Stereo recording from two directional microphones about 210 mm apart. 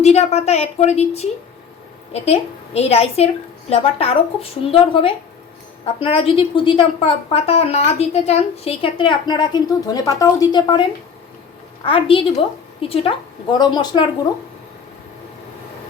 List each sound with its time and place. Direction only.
0.0 s a woman's voice: 30° left (ahead or behind)
11.9 s a woman's voice: 25° left (ahead or behind)